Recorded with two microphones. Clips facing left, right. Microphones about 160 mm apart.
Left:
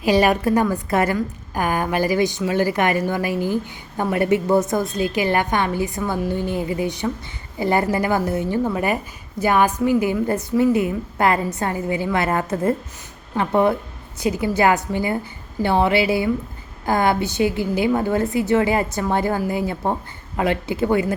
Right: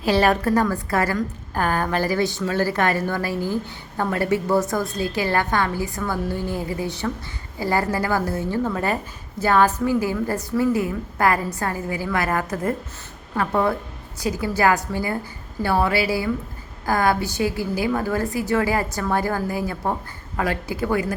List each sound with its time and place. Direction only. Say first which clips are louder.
0.0 s a woman's voice: left 2 dB; 15° left (ahead or behind)